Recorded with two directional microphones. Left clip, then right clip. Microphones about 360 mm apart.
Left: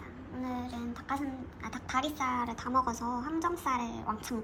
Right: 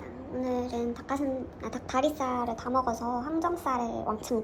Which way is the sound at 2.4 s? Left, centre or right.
Left.